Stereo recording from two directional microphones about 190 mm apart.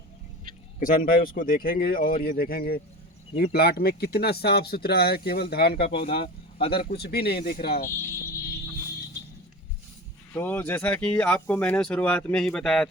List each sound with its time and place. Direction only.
0.8 s speech: 45° left (ahead or behind)
6.1 s speech: 30° left (ahead or behind)
6.7 s speech: 55° left (ahead or behind)
10.3 s speech: 10° left (ahead or behind)